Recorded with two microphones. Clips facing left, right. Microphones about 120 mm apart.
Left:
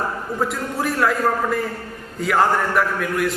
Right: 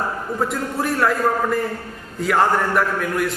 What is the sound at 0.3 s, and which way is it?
A man's voice, centre (ahead or behind).